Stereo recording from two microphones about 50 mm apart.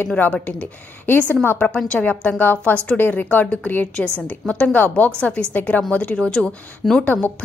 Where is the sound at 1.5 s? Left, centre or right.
Left.